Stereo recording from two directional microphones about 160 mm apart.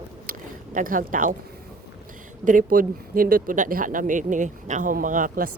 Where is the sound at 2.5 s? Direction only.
60° right (ahead or behind).